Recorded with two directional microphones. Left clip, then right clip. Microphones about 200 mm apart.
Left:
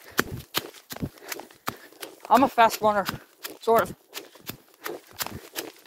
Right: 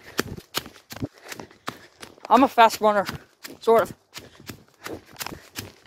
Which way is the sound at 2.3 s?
40° right (ahead or behind).